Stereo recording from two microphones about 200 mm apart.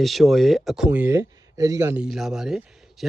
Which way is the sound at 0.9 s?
10° right (ahead or behind).